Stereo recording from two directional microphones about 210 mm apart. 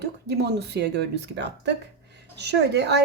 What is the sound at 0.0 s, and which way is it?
Speech, 50° right (ahead or behind).